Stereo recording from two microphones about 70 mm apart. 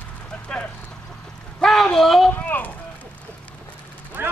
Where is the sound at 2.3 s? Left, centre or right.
Left.